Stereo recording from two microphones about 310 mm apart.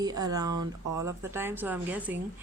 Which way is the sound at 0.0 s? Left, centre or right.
Centre.